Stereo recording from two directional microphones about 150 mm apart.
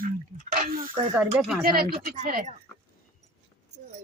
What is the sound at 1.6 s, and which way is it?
Speech, 90° right.